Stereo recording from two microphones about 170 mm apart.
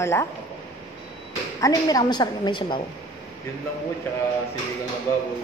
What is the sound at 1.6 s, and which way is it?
A woman's voice, 20° left (ahead or behind).